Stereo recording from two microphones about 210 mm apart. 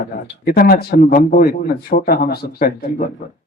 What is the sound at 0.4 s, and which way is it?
Speech, 45° left (ahead or behind).